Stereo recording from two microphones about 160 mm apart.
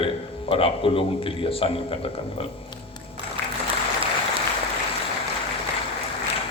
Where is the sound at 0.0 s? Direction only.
35° left (ahead or behind).